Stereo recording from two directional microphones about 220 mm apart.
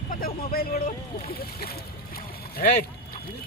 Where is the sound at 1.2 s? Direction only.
45° left (ahead or behind).